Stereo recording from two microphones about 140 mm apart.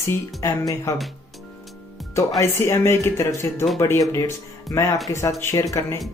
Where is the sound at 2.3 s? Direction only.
20° left (ahead or behind).